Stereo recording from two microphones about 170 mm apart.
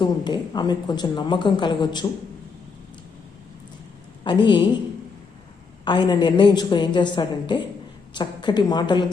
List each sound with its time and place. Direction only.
0.0 s a woman's voice: 25° left (ahead or behind)
4.2 s a woman's voice: 25° left (ahead or behind)
5.8 s a woman's voice: 25° left (ahead or behind)